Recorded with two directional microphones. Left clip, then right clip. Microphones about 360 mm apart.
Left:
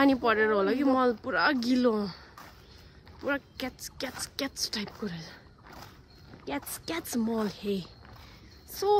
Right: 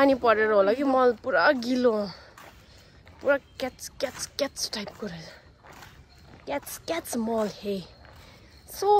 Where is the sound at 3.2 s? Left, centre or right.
Centre.